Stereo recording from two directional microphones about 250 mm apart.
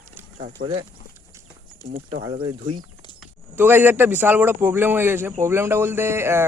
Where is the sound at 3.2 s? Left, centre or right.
Centre.